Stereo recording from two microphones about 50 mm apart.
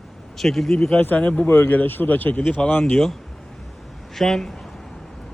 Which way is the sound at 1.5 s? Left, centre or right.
Left.